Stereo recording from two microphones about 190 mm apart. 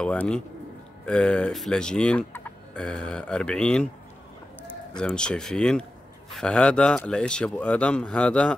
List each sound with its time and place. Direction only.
0.0 s fowl: 5° left (ahead or behind)
4.9 s fowl: 5° left (ahead or behind)